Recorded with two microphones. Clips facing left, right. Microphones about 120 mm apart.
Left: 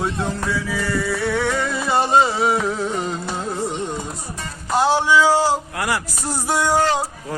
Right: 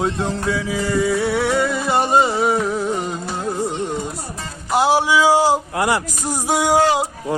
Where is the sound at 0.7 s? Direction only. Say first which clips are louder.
Right 7 dB; 20° right (ahead or behind).